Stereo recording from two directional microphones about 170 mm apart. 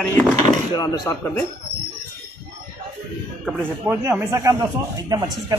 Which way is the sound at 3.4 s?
5° right (ahead or behind).